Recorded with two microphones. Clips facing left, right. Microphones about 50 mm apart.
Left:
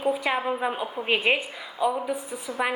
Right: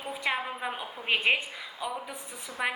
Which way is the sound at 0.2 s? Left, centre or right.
Centre.